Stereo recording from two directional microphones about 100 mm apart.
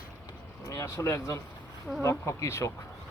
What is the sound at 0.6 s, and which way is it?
Speech, 30° left (ahead or behind).